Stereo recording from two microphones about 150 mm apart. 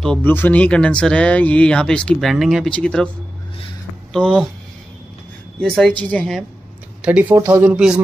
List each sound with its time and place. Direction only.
0.0 s speech: 10° left (ahead or behind)
4.1 s a woman's voice: 5° left (ahead or behind)
5.6 s a woman's voice: 5° left (ahead or behind)
7.0 s speech: 10° right (ahead or behind)